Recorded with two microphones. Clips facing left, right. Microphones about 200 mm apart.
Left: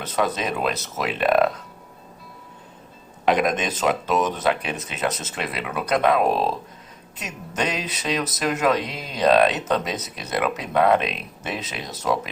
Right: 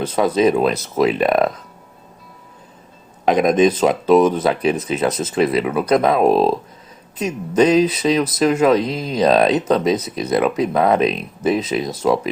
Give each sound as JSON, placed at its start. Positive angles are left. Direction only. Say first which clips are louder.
{"t": 0.0, "sound": "speech", "louder": "right 9 dB", "side_deg": -30}
{"t": 3.5, "sound": "speech", "louder": "right 9 dB", "side_deg": -35}